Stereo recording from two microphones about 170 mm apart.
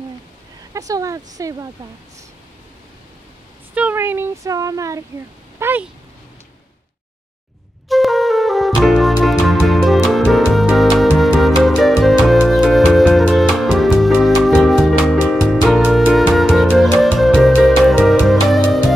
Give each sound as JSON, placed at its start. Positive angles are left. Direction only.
{"t": 0.7, "sound": "speech", "side_deg": -20}
{"t": 3.7, "sound": "speech", "side_deg": -10}
{"t": 5.6, "sound": "a sound", "side_deg": -10}
{"t": 7.9, "sound": "music", "side_deg": 0}